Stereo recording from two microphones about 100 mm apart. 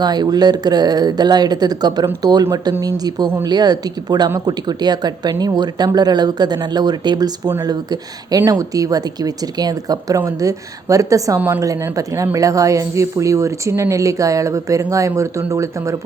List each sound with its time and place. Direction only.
0.0 s speech: 45° right (ahead or behind)
11.3 s a woman's voice: 20° right (ahead or behind)
11.6 s speech: 35° right (ahead or behind)